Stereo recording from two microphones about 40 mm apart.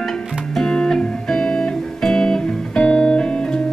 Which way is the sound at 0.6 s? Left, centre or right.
Centre.